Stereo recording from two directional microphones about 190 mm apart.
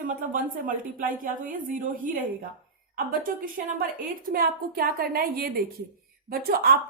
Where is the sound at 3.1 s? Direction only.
50° right (ahead or behind).